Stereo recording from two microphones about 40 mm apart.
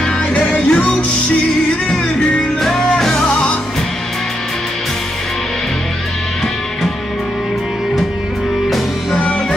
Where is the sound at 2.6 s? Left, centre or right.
Centre.